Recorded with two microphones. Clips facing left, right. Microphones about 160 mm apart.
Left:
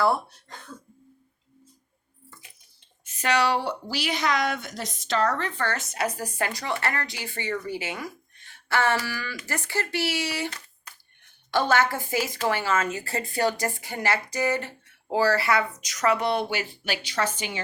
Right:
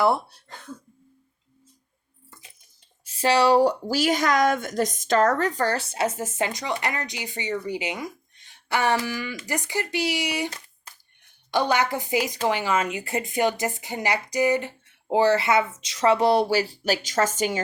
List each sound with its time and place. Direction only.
0.0 s a woman's voice: 25° right (ahead or behind)
3.0 s a woman's voice: 30° right (ahead or behind); by 10.5 s 15° right (ahead or behind)
11.5 s a woman's voice: 15° right (ahead or behind); by 17.6 s 40° right (ahead or behind)